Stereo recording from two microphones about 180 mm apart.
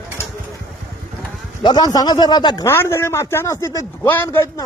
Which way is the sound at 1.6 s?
25° left (ahead or behind).